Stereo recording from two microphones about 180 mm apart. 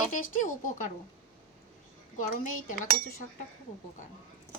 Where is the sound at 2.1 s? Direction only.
45° left (ahead or behind).